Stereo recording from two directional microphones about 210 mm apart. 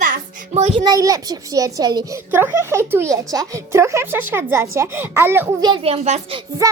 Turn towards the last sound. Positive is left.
turn(degrees=-30)  # may be behind; listen again after turning